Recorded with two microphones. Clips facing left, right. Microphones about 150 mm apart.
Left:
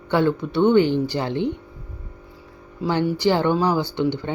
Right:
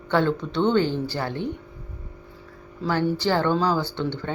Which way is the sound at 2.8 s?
15° left (ahead or behind).